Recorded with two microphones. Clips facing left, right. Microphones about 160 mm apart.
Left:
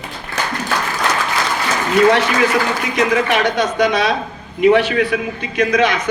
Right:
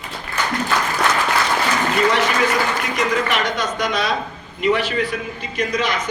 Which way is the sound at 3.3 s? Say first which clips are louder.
Left 6 dB; 65° left (ahead or behind).